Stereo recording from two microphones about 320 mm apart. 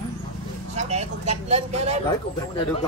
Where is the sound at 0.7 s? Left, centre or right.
Right.